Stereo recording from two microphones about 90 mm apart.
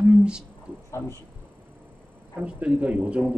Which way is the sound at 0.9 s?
30° left (ahead or behind).